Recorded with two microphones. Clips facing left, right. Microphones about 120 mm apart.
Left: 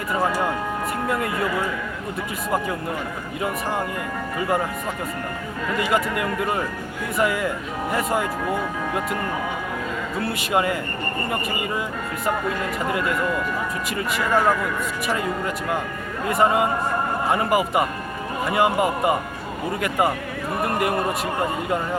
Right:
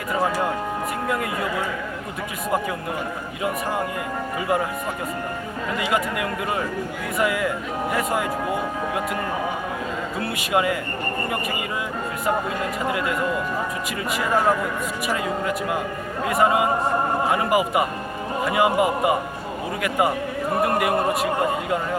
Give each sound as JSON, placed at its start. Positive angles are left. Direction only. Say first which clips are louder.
{"t": 1.0, "sound": "speech", "louder": "left 1 dB", "side_deg": 0}
{"t": 4.4, "sound": "speech", "louder": "even", "side_deg": -5}
{"t": 5.7, "sound": "speech", "louder": "left 2 dB", "side_deg": 0}
{"t": 10.2, "sound": "speech", "louder": "left 1 dB", "side_deg": 0}
{"t": 12.2, "sound": "speech", "louder": "even", "side_deg": -5}